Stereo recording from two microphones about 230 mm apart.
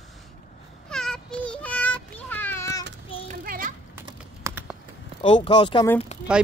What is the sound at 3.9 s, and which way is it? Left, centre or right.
Typing, centre.